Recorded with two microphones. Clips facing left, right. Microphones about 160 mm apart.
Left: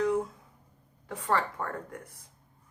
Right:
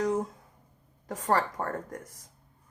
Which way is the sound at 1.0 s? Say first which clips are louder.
Right 2 dB; 40° right (ahead or behind).